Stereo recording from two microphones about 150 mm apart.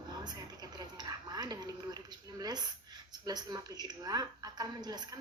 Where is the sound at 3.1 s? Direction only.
25° right (ahead or behind).